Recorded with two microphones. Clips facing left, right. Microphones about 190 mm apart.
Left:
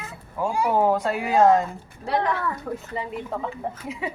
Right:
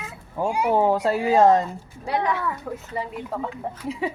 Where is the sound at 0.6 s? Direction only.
30° right (ahead or behind).